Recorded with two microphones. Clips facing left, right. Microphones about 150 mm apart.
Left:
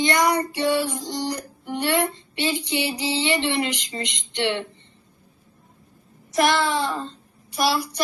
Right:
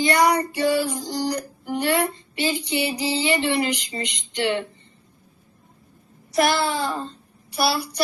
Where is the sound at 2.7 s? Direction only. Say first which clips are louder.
Right 1 dB; 35° right (ahead or behind).